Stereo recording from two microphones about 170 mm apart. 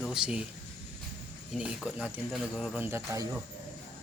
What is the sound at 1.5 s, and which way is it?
Speech, 5° right (ahead or behind).